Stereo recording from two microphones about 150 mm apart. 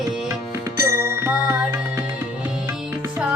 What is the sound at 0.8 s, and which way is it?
Music, 15° right (ahead or behind).